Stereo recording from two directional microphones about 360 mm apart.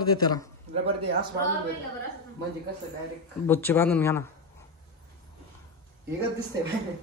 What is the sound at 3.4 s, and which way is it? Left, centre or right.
Speech, centre.